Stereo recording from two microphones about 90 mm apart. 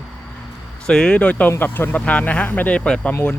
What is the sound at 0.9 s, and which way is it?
Speech, 10° left (ahead or behind).